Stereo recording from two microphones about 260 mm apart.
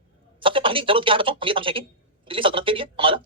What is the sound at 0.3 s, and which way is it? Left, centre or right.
Speech, centre.